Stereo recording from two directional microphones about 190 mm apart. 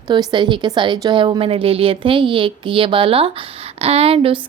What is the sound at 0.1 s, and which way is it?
A woman's voice, 25° right (ahead or behind).